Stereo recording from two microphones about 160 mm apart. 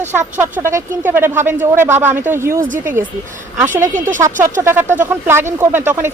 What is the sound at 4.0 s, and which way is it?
Speech, 55° right (ahead or behind).